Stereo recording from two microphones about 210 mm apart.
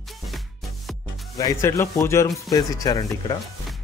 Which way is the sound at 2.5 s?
15° left (ahead or behind).